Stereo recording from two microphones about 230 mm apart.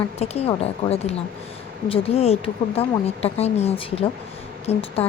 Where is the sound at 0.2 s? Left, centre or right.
Left.